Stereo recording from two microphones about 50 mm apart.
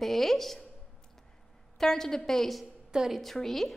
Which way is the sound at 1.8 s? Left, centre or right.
Centre.